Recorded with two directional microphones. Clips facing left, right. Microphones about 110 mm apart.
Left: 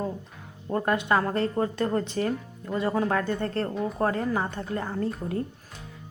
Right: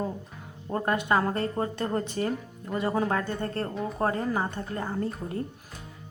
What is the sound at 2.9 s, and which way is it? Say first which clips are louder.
Speech: left 1 dB; 15° right (ahead or behind).